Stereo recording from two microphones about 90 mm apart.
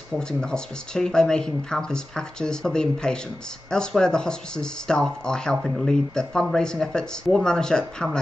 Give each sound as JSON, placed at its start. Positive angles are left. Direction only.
{"t": 0.1, "sound": "speech", "side_deg": 10}